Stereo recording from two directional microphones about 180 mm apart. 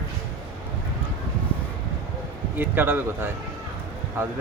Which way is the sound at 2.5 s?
10° right (ahead or behind).